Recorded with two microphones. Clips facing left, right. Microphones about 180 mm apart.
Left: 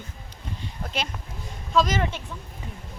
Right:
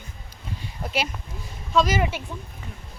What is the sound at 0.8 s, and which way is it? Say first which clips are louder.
A woman's voice: right 4 dB; 10° right (ahead or behind).